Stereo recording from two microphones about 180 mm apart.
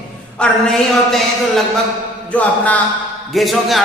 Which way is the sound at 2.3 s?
10° left (ahead or behind).